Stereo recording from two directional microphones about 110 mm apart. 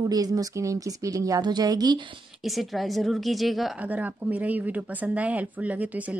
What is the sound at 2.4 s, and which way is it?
A woman's voice, centre (ahead or behind).